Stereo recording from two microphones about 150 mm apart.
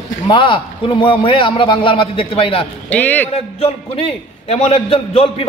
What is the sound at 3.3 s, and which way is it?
A man's voice, 40° left (ahead or behind).